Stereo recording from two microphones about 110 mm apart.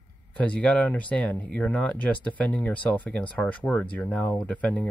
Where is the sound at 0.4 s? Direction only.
10° left (ahead or behind).